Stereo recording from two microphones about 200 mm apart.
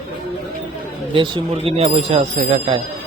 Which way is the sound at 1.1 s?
25° right (ahead or behind).